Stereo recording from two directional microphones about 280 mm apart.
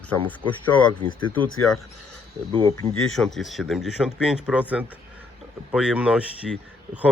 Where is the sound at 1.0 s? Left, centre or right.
Centre.